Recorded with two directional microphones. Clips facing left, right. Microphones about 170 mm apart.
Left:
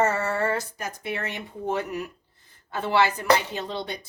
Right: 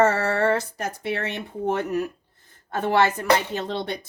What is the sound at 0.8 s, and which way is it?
Speech, 65° right (ahead or behind).